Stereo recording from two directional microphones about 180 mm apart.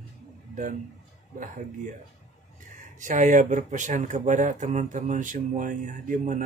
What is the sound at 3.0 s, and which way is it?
Speech, 45° right (ahead or behind).